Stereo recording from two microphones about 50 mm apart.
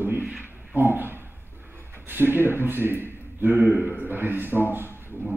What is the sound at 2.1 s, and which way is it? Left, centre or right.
Speech, right.